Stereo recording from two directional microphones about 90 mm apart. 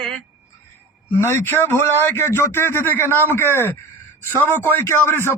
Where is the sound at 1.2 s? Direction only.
25° left (ahead or behind).